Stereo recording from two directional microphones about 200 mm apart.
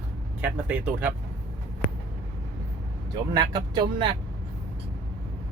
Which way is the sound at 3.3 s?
20° right (ahead or behind).